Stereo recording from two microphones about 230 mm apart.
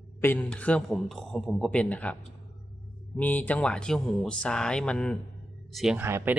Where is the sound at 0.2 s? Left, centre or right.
Centre.